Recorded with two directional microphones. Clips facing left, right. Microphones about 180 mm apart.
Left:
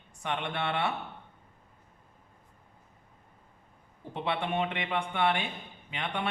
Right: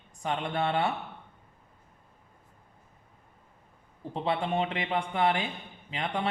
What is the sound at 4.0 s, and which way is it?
Speech, 30° right (ahead or behind).